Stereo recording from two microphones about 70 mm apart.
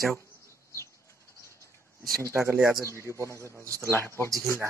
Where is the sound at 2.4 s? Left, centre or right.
Right.